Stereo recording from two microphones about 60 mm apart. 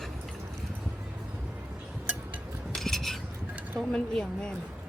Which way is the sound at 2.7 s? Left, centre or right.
Centre.